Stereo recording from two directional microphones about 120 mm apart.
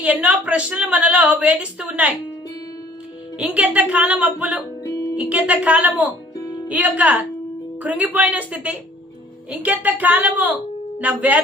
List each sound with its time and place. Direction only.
0.0 s a woman's voice: 10° right (ahead or behind)
3.3 s a woman's voice: 10° right (ahead or behind)
4.8 s music: 25° left (ahead or behind)
5.1 s a woman's voice: 10° right (ahead or behind)
6.1 s music: 25° left (ahead or behind)
6.7 s a woman's voice: 15° right (ahead or behind)